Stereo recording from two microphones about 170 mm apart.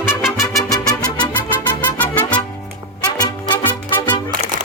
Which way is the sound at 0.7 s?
25° left (ahead or behind).